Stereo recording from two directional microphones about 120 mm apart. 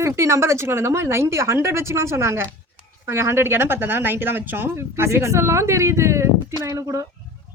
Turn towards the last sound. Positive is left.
turn(degrees=-25)  # may be behind; listen again after turning